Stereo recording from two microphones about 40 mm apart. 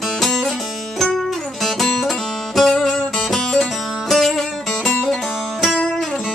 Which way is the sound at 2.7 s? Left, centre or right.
Centre.